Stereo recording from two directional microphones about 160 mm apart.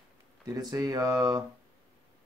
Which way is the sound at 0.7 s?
25° right (ahead or behind).